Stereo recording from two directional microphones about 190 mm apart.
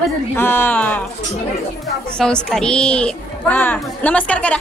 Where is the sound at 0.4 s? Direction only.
10° left (ahead or behind).